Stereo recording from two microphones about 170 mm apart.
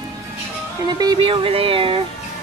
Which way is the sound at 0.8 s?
25° right (ahead or behind).